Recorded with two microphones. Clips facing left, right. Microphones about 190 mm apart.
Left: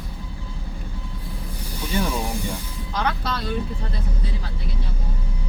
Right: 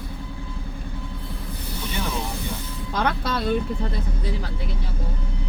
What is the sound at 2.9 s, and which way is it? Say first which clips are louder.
Music: right 1 dB; 55° right (ahead or behind).